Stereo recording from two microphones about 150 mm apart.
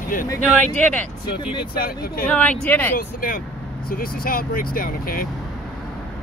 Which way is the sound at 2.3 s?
10° left (ahead or behind).